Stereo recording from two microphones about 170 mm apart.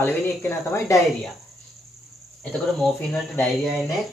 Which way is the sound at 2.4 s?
5° left (ahead or behind).